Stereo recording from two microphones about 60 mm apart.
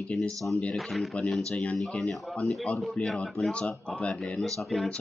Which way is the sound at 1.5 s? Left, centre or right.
Left.